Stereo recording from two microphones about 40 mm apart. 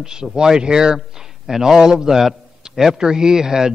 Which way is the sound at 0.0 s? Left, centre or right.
Centre.